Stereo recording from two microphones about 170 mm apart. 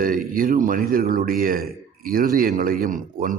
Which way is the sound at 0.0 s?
55° right (ahead or behind).